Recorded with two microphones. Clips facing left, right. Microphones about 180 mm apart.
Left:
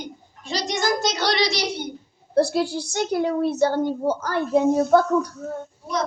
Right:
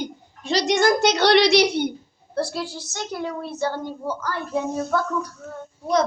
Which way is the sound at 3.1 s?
35° left (ahead or behind).